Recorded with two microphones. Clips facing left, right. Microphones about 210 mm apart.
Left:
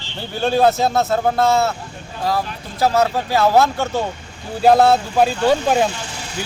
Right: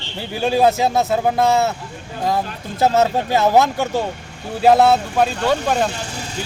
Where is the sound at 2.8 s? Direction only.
25° right (ahead or behind).